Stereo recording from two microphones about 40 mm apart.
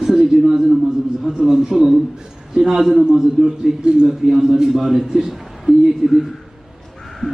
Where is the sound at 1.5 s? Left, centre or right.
Centre.